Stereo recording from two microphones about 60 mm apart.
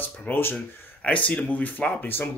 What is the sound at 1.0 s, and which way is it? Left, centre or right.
Speech, left.